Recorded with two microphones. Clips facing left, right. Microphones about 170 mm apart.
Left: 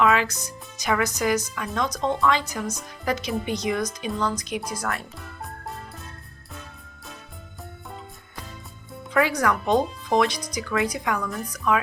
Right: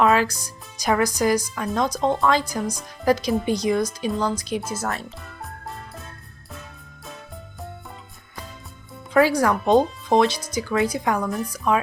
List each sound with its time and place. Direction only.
0.0 s speech: 40° right (ahead or behind)
5.2 s music: centre (ahead or behind)
9.1 s speech: 35° right (ahead or behind)